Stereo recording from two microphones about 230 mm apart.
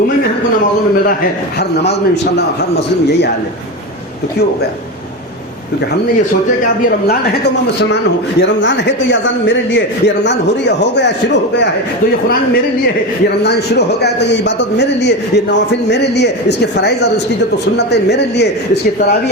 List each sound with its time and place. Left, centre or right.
8.4 s a man's voice: left
13.4 s a man's voice: left